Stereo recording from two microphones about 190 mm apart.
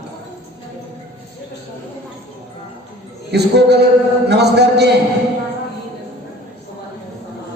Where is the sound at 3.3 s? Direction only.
60° right (ahead or behind).